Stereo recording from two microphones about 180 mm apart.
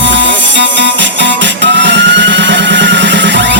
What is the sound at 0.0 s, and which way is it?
Music, 90° right.